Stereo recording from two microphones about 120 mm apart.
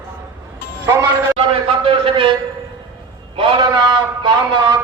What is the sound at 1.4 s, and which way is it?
Speech, 50° right (ahead or behind).